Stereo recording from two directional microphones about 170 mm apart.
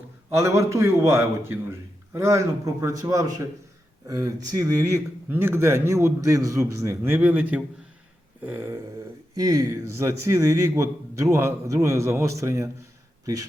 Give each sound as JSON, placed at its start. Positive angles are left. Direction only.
{"t": 0.3, "sound": "a man's voice", "side_deg": -15}